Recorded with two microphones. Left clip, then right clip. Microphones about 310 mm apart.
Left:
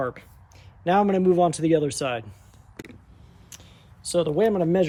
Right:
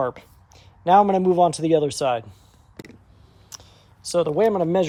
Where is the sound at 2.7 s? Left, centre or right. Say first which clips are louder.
Even; centre.